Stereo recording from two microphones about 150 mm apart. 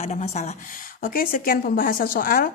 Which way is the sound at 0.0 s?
50° left (ahead or behind).